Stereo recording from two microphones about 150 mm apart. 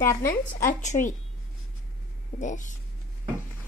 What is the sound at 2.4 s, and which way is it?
Speech, 55° left (ahead or behind).